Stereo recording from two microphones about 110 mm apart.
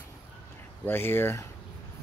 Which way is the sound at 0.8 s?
20° left (ahead or behind).